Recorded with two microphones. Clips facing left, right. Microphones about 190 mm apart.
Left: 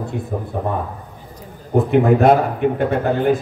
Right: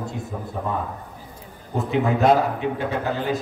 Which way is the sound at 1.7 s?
55° left (ahead or behind).